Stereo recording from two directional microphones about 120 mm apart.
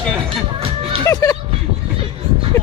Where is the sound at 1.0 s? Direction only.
30° left (ahead or behind).